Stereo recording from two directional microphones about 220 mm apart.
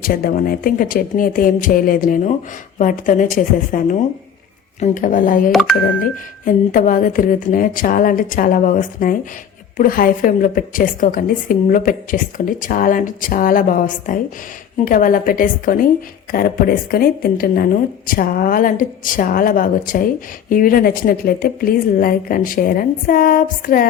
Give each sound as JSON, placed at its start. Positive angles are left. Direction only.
{"t": 0.0, "sound": "a woman's voice", "side_deg": 40}
{"t": 5.5, "sound": "speech", "side_deg": 0}
{"t": 6.4, "sound": "a woman's voice", "side_deg": 40}